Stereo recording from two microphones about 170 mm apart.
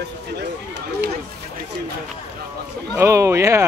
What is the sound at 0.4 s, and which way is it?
Run, 75° right (ahead or behind).